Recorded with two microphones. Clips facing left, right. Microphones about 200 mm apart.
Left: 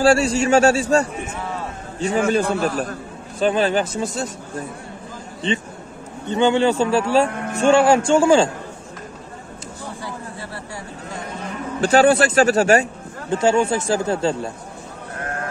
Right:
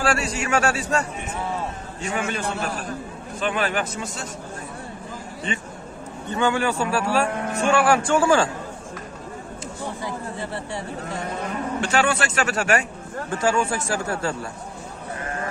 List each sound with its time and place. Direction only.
0.0 s speech: 30° left (ahead or behind)
6.3 s speech: 20° left (ahead or behind)
10.0 s a sound: 20° right (ahead or behind)
11.8 s speech: 35° left (ahead or behind)